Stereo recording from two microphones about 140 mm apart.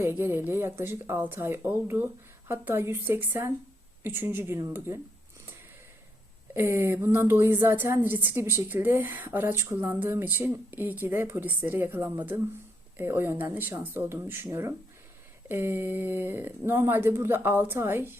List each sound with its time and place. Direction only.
0.0 s a woman's voice: 15° right (ahead or behind)
6.5 s a woman's voice: 15° right (ahead or behind)